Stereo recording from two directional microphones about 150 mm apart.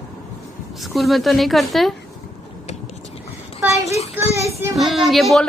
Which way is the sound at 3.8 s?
45° left (ahead or behind).